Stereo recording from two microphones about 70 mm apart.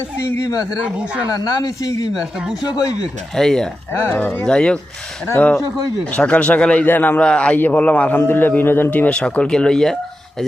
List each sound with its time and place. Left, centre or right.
0.2 s speech: left
1.3 s a man's voice: left
3.3 s a man's voice: centre
3.9 s speech: left
4.4 s a man's voice: centre
6.1 s a man's voice: centre
6.8 s a man's voice: left
7.2 s a man's voice: centre